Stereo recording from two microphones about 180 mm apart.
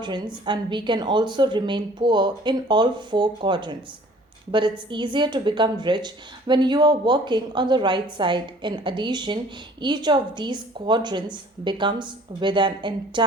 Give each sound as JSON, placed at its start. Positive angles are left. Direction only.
{"t": 0.4, "sound": "a woman's voice", "side_deg": -25}